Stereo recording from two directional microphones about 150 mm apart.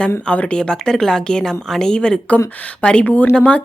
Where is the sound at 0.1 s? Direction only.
10° left (ahead or behind).